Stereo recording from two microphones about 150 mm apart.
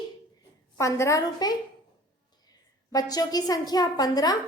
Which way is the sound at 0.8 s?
20° left (ahead or behind).